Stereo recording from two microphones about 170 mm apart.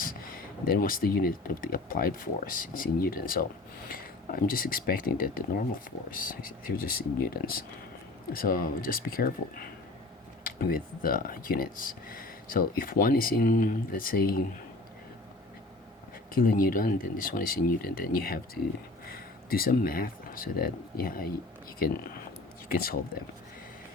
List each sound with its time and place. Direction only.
0.0 s speech: 55° left (ahead or behind)
16.3 s speech: 55° left (ahead or behind)